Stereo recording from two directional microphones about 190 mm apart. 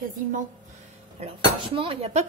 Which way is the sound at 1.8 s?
30° right (ahead or behind).